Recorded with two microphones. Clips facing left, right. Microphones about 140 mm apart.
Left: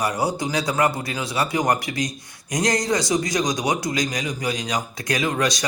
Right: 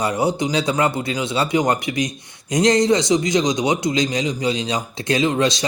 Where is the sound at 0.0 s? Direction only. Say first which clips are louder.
Right 3 dB; 25° right (ahead or behind).